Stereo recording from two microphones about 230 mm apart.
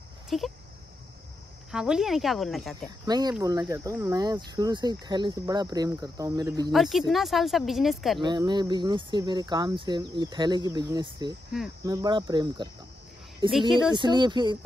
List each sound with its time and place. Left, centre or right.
0.3 s speech: centre
1.7 s speech: centre
3.1 s speech: centre
6.7 s speech: centre
8.2 s speech: centre
13.5 s speech: centre
13.9 s speech: centre